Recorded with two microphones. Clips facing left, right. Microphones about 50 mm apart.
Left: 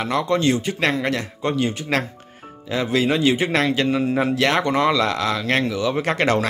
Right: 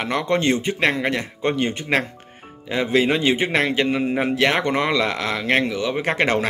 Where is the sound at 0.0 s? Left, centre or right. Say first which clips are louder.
Left 1 dB; right.